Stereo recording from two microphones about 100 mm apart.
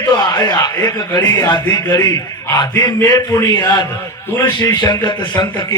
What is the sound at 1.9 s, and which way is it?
A man's voice, 35° left (ahead or behind).